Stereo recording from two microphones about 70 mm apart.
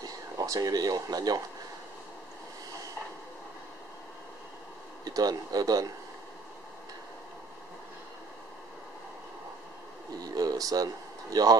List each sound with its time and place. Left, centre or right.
0.0 s speech: right
5.0 s speech: right
10.2 s a sound: right